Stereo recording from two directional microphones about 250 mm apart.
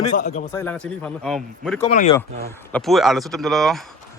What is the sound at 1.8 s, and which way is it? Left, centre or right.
Speech, left.